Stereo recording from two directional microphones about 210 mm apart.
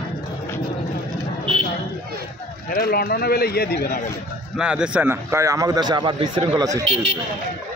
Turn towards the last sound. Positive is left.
turn(degrees=-25)  # may be behind; listen again after turning